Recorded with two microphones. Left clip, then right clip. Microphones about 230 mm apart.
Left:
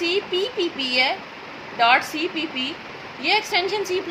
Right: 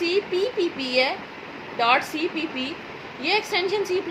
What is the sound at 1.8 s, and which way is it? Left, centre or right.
A woman's voice, left.